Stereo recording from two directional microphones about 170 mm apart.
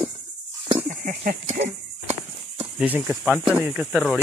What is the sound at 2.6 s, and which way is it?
Speech, 10° right (ahead or behind).